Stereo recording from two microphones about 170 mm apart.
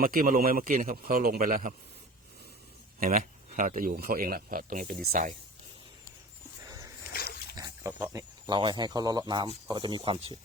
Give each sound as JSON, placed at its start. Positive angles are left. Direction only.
{"t": 0.0, "sound": "speech", "side_deg": -55}
{"t": 3.0, "sound": "speech", "side_deg": -55}
{"t": 6.7, "sound": "a sound", "side_deg": -20}
{"t": 7.1, "sound": "dog", "side_deg": 65}
{"t": 7.5, "sound": "pig", "side_deg": -25}
{"t": 7.9, "sound": "speech", "side_deg": -10}
{"t": 8.4, "sound": "speech", "side_deg": -30}